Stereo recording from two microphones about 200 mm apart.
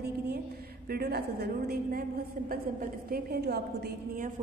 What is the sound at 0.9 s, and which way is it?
A woman's voice, 50° right (ahead or behind).